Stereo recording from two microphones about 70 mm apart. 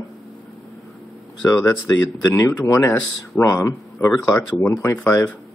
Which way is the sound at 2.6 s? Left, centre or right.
Left.